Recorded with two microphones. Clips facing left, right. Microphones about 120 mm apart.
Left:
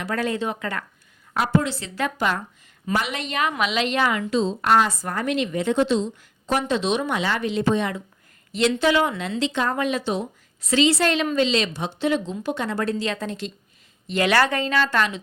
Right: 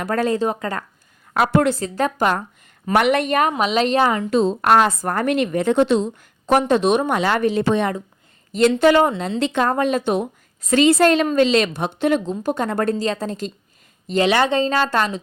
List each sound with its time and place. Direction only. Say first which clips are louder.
0.0 s a woman's voice: right 5 dB; 40° right (ahead or behind)
1.3 s a woman's voice: right 5 dB; 70° right (ahead or behind)
1.8 s a woman's voice: right 5 dB; 40° right (ahead or behind)
2.8 s a woman's voice: right 9 dB; 60° right (ahead or behind)
3.5 s a woman's voice: right 5 dB; 40° right (ahead or behind)
4.3 s a woman's voice: right 4 dB; 55° right (ahead or behind); by 9.4 s 35° right (ahead or behind)
9.4 s a woman's voice: right 5 dB; 55° right (ahead or behind)
14.3 s a woman's voice: right 2 dB; 20° right (ahead or behind); by 15.2 s 40° right (ahead or behind)